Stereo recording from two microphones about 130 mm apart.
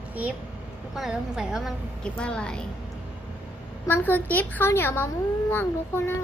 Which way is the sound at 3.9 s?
15° left (ahead or behind).